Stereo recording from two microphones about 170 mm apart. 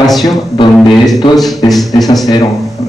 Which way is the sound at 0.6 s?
25° left (ahead or behind).